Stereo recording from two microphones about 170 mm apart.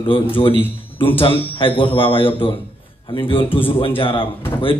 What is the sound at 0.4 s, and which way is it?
A man's voice, 30° left (ahead or behind).